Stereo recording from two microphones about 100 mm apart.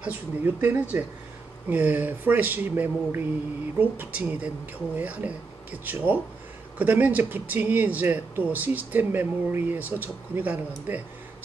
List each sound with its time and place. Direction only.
0.0 s speech: 20° right (ahead or behind)